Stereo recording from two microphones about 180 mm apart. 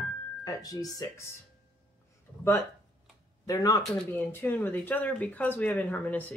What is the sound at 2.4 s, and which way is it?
Speech, 15° left (ahead or behind).